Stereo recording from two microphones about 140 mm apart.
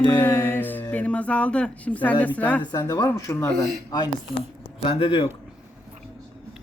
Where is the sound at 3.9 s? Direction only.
30° left (ahead or behind).